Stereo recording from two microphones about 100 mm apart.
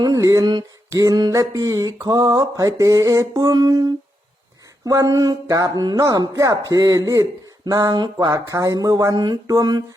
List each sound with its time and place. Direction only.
0.0 s a sound: 40° right (ahead or behind)
0.9 s speech: 40° right (ahead or behind)
8.3 s speech: 35° right (ahead or behind)